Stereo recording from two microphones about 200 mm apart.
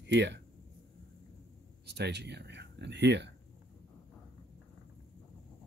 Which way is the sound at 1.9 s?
55° right (ahead or behind).